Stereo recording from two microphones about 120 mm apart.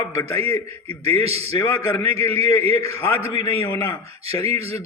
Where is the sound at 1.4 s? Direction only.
25° left (ahead or behind).